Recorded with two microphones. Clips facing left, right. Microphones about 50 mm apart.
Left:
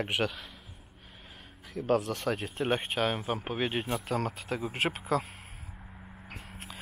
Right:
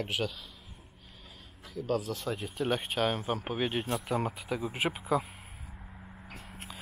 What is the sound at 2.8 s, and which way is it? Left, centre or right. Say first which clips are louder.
Speech: even; centre.